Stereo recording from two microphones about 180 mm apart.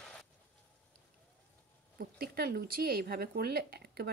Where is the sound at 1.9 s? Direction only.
55° right (ahead or behind).